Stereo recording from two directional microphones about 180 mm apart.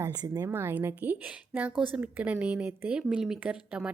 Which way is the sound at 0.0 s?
20° right (ahead or behind).